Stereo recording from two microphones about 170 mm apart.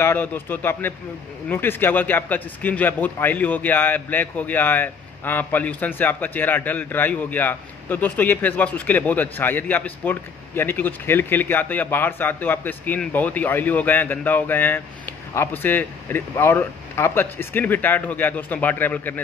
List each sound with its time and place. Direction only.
0.0 s a man's voice: 15° left (ahead or behind)